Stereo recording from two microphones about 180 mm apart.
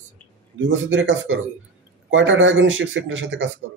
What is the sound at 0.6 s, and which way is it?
Speech, 90° right.